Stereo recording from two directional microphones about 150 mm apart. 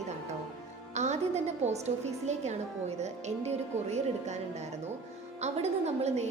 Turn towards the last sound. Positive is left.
turn(degrees=-45)  # may be behind; listen again after turning